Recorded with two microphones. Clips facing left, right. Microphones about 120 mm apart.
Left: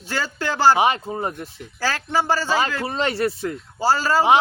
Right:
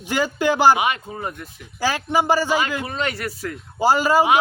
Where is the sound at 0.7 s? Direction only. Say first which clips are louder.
Left 4 dB; 30° left (ahead or behind).